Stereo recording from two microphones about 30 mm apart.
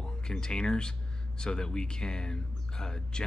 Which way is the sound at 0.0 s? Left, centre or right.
Left.